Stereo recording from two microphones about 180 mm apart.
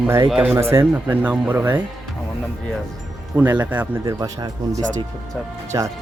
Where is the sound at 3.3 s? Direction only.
10° right (ahead or behind).